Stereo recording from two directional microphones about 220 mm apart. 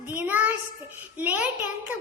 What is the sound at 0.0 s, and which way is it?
Child singing, 10° right (ahead or behind).